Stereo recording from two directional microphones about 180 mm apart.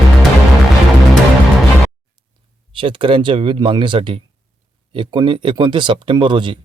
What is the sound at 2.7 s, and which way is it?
Speech, 30° right (ahead or behind).